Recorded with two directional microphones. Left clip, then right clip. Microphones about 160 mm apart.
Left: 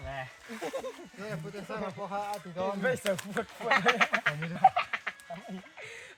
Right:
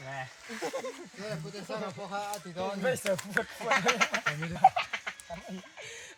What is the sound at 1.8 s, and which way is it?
Speech, 25° right (ahead or behind).